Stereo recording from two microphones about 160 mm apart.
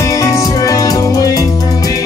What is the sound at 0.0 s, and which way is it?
Music, 20° left (ahead or behind).